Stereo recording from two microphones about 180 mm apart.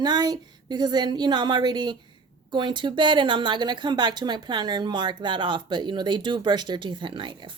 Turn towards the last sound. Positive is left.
turn(degrees=-25)  # may be behind; listen again after turning